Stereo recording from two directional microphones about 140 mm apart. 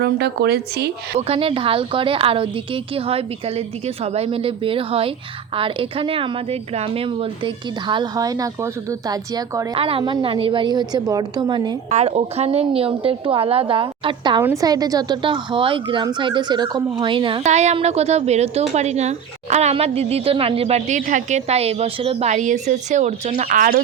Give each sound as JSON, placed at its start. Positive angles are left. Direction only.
{"t": 1.3, "sound": "a woman's voice", "side_deg": -40}
{"t": 9.7, "sound": "a woman's voice", "side_deg": -40}
{"t": 10.0, "sound": "a woman's voice", "side_deg": -30}
{"t": 10.2, "sound": "a woman's voice", "side_deg": -40}
{"t": 11.9, "sound": "a woman's voice", "side_deg": -50}
{"t": 14.4, "sound": "a woman's voice", "side_deg": -25}
{"t": 17.4, "sound": "a woman's voice", "side_deg": -55}
{"t": 22.3, "sound": "speech", "side_deg": -60}
{"t": 23.5, "sound": "speech", "side_deg": -80}